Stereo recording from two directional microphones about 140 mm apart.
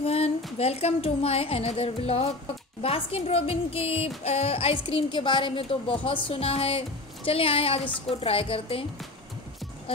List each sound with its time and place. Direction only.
0.0 s a woman's voice: 45° left (ahead or behind)